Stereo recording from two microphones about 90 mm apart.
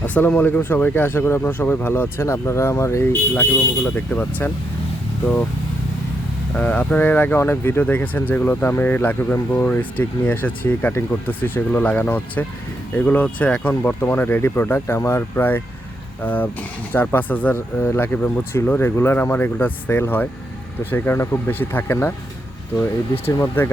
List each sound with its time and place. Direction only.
0.0 s speech: 20° left (ahead or behind)
6.6 s speech: 15° left (ahead or behind)
16.2 s speech: 20° left (ahead or behind)
23.4 s speech: 30° left (ahead or behind)